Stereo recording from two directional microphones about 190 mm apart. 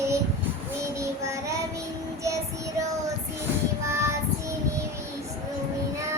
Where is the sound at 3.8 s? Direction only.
15° right (ahead or behind).